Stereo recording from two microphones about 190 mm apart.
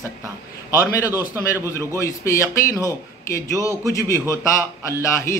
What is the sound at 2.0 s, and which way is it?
A man's voice, 15° left (ahead or behind).